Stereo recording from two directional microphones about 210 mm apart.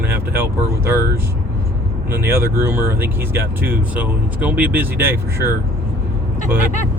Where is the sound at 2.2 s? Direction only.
10° right (ahead or behind).